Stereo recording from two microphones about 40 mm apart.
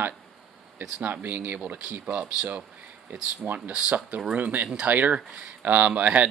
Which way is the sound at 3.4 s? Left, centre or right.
Right.